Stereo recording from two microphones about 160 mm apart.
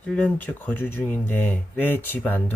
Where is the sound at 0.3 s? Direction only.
10° left (ahead or behind).